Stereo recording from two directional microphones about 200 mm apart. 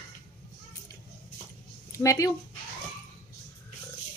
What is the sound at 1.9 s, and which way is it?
Speech, 15° left (ahead or behind).